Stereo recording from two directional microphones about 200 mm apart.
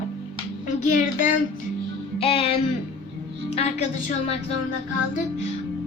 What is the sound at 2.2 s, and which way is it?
Speech, 30° left (ahead or behind).